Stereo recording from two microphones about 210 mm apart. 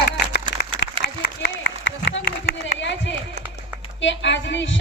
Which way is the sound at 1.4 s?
55° left (ahead or behind).